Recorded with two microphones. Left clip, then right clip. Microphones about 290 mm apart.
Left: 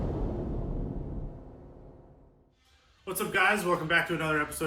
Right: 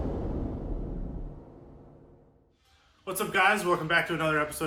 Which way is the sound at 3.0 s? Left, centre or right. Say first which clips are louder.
Right 2 dB; centre.